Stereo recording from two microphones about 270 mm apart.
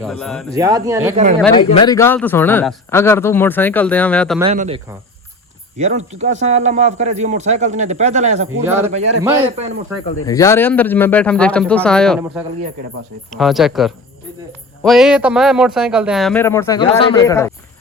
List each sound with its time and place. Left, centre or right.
0.0 s speech: centre
0.5 s a man's voice: centre
1.1 s a man's voice: right
1.5 s a man's voice: centre
4.5 s a man's voice: right
10.2 s speech: centre